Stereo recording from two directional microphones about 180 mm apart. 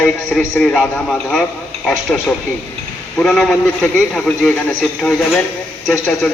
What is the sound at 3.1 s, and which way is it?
A man's voice, centre (ahead or behind).